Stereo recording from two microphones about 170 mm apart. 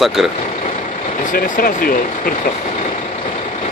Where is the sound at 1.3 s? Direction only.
55° left (ahead or behind).